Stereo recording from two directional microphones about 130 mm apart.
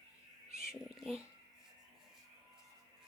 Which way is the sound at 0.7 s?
5° right (ahead or behind).